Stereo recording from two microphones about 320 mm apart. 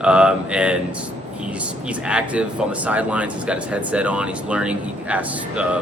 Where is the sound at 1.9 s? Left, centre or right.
Centre.